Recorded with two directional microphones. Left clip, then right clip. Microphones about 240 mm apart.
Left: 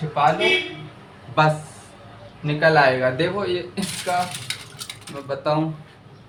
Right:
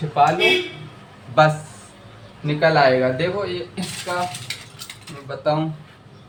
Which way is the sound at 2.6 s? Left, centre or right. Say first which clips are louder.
Right 1 dB; centre.